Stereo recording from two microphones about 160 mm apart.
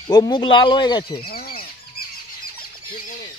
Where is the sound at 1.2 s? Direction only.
70° left (ahead or behind).